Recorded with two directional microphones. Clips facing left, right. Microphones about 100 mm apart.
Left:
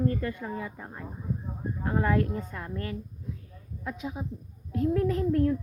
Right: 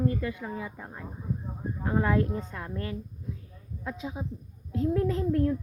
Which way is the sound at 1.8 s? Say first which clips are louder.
Even; 10° right (ahead or behind).